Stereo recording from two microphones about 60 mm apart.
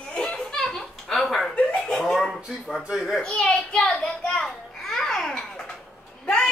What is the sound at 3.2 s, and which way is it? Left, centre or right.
Speech, centre.